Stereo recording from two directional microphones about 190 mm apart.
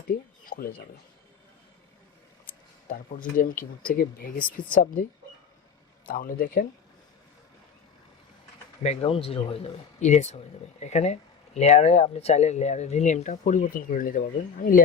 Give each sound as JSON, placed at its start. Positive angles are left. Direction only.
{"t": 0.1, "sound": "a sound", "side_deg": 50}
{"t": 2.5, "sound": "speech", "side_deg": 45}
{"t": 6.1, "sound": "speech", "side_deg": 50}
{"t": 8.8, "sound": "speech", "side_deg": 35}